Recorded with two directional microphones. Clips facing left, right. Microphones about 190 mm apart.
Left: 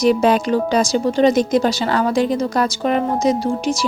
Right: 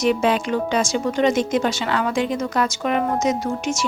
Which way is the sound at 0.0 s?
35° left (ahead or behind).